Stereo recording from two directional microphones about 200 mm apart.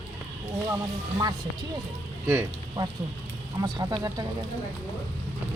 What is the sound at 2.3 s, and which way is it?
A woman's voice, 15° right (ahead or behind).